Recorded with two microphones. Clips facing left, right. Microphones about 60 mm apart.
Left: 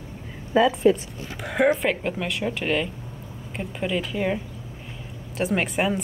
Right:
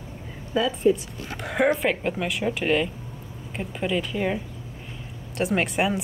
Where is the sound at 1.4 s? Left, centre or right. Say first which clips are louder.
Left 1 dB; centre.